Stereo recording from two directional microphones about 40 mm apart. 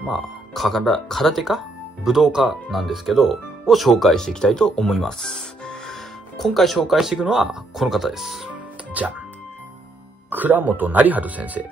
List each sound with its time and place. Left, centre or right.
0.0 s speech: centre
2.4 s speech: centre
4.1 s speech: centre
6.9 s speech: centre
8.5 s music: right
10.3 s speech: right